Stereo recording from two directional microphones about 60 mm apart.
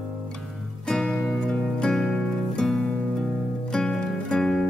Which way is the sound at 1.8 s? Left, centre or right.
Centre.